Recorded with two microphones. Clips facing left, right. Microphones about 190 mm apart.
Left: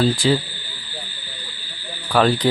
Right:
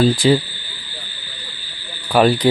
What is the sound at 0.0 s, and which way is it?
Speech, 15° right (ahead or behind).